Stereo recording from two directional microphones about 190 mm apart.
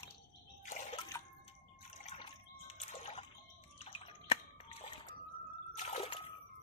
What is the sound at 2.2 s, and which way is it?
Water, 35° left (ahead or behind).